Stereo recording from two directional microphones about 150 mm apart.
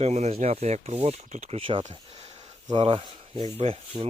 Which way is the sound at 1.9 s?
40° right (ahead or behind).